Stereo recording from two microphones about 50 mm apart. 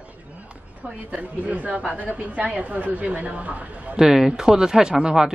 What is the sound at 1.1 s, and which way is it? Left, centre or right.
A woman's voice, right.